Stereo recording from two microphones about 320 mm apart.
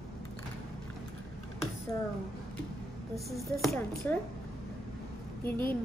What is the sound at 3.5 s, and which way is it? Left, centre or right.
Speech, centre.